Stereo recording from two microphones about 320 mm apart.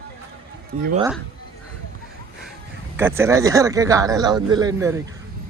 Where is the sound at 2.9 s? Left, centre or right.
Centre.